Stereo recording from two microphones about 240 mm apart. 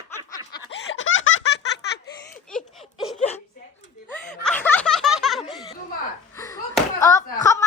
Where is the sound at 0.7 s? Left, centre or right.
Left.